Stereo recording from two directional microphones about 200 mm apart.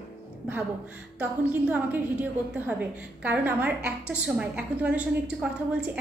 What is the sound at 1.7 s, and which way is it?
A woman's voice, 10° right (ahead or behind).